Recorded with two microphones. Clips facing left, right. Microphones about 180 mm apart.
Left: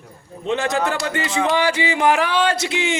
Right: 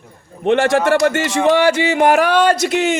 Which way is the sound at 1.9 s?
45° right (ahead or behind).